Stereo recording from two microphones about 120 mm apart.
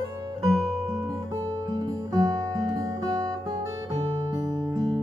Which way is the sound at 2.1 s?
35° right (ahead or behind).